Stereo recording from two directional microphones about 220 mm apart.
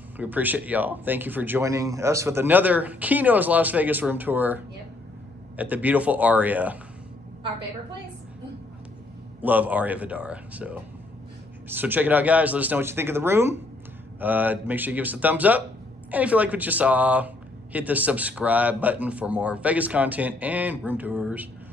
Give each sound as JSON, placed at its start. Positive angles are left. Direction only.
{"t": 0.2, "sound": "speech", "side_deg": -10}
{"t": 9.4, "sound": "speech", "side_deg": -5}